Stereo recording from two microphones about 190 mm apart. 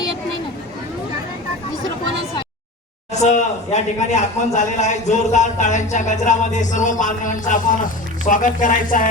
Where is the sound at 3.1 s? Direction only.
35° left (ahead or behind).